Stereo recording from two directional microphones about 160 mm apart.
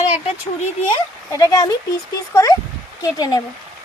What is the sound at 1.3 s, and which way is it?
Speech, 25° left (ahead or behind).